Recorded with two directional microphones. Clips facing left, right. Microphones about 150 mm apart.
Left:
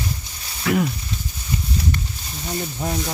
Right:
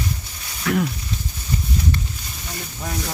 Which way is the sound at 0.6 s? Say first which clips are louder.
Left 1 dB; 5° left (ahead or behind).